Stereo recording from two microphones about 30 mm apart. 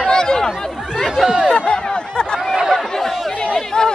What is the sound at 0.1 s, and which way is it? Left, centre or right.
Chatter, left.